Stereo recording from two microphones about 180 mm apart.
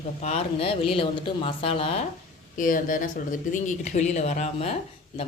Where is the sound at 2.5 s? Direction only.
50° left (ahead or behind).